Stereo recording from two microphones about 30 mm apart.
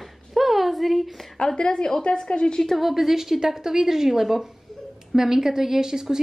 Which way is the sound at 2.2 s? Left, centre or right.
Left.